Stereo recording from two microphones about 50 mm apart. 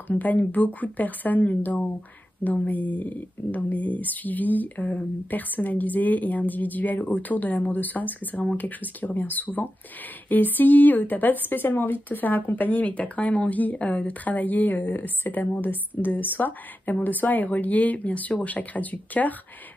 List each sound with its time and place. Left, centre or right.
0.2 s speech: left